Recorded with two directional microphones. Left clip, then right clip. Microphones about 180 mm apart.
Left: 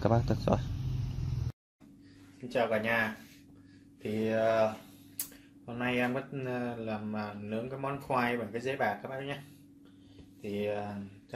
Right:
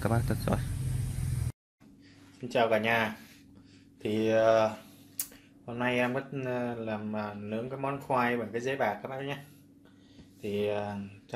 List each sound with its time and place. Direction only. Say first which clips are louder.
0.0 s speech: left 2 dB; centre (ahead or behind)
2.4 s speech: right 3 dB; 35° right (ahead or behind)
5.7 s speech: right 2 dB; 10° right (ahead or behind)
10.4 s speech: right 3 dB; 30° right (ahead or behind)